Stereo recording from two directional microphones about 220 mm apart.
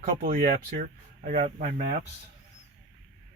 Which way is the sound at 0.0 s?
40° right (ahead or behind).